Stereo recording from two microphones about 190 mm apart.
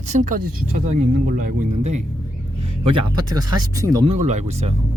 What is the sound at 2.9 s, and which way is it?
Speech, 20° right (ahead or behind).